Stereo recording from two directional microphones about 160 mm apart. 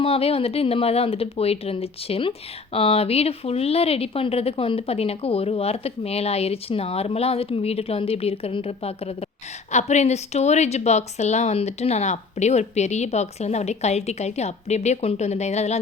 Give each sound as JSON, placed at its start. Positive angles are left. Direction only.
{"t": 0.0, "sound": "a woman's voice", "side_deg": 35}